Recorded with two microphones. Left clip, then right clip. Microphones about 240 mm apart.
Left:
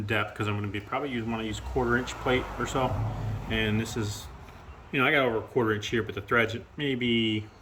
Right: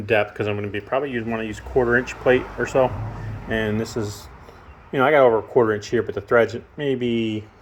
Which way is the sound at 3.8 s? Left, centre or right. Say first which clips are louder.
Right 6 dB; right.